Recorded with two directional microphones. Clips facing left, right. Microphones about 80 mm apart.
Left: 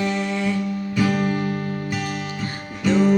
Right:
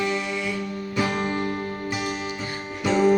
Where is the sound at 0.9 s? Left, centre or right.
Right.